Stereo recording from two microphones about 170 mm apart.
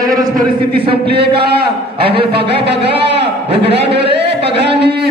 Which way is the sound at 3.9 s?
85° right.